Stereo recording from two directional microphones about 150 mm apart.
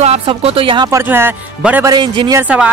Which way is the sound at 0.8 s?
15° right (ahead or behind).